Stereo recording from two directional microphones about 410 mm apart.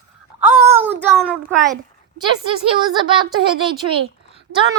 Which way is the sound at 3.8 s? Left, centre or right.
Right.